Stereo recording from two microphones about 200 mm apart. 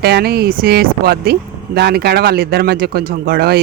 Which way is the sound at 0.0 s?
50° right (ahead or behind).